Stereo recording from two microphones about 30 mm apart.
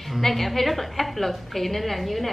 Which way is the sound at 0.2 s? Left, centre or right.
Centre.